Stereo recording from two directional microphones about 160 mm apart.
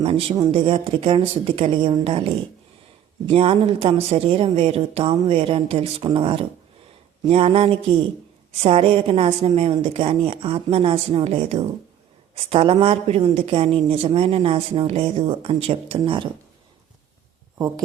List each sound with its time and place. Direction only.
0.0 s speech: 35° right (ahead or behind)